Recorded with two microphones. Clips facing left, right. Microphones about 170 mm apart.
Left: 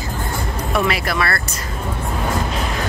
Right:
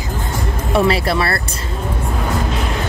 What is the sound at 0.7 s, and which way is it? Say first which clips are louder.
Speech: right 5 dB; 30° right (ahead or behind).